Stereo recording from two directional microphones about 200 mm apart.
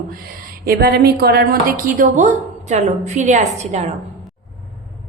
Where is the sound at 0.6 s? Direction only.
50° right (ahead or behind); by 3.9 s 35° right (ahead or behind).